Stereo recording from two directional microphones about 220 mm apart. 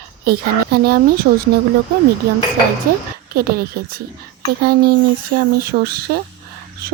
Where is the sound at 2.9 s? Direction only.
40° right (ahead or behind).